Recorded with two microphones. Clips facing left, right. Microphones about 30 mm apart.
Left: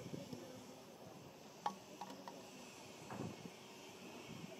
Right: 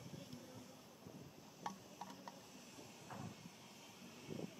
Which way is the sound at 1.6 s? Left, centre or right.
Left.